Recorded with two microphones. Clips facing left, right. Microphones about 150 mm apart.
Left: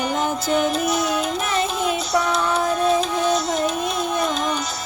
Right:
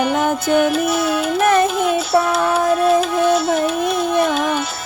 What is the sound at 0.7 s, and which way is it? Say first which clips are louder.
Music: right 4 dB; 5° right (ahead or behind).